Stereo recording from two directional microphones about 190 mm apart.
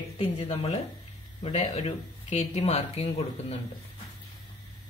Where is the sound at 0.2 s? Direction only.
30° left (ahead or behind).